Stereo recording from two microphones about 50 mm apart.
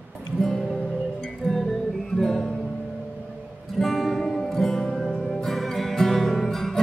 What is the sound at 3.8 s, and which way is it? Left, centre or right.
Music, centre.